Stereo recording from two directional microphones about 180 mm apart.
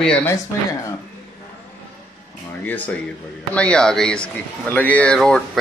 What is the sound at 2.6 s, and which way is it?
Speech, 10° left (ahead or behind).